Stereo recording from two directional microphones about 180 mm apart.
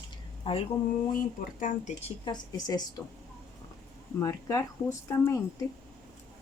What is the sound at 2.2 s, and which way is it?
Speech, 20° left (ahead or behind).